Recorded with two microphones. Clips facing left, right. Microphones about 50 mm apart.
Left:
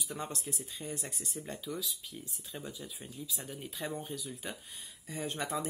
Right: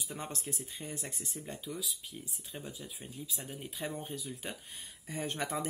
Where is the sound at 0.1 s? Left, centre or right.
Right.